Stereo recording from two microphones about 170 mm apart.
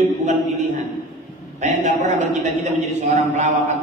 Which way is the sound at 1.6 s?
45° right (ahead or behind).